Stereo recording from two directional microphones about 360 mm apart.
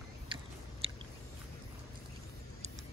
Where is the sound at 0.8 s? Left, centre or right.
Centre.